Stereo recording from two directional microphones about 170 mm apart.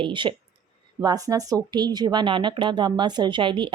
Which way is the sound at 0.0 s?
30° right (ahead or behind).